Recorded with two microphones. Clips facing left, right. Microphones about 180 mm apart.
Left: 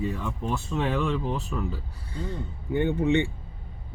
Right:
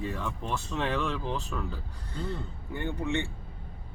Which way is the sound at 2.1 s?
15° left (ahead or behind).